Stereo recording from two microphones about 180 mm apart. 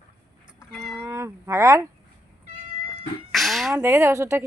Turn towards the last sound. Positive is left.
turn(degrees=-15)  # may be behind; listen again after turning